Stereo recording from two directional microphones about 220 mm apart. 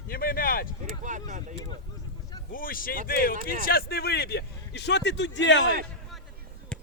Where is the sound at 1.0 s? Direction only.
35° right (ahead or behind).